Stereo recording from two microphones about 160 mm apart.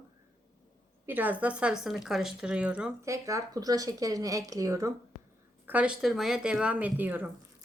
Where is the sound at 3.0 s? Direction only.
20° right (ahead or behind).